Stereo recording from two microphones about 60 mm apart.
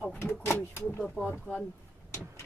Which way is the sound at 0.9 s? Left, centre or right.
Centre.